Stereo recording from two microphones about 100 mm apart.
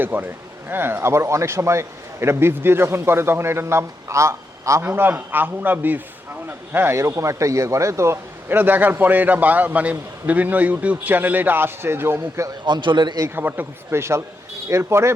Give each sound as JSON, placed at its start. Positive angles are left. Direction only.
{"t": 0.0, "sound": "speech", "side_deg": -20}
{"t": 4.9, "sound": "speech", "side_deg": -20}
{"t": 12.6, "sound": "a man's voice", "side_deg": -50}
{"t": 13.2, "sound": "speech", "side_deg": -20}